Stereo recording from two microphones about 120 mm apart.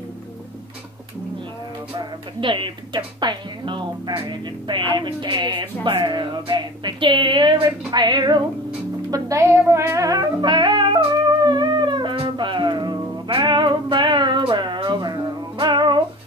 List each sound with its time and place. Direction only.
2.0 s speech: 40° right (ahead or behind)
9.1 s music: 25° right (ahead or behind)